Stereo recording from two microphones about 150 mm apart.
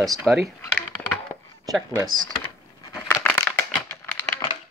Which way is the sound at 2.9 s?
15° left (ahead or behind).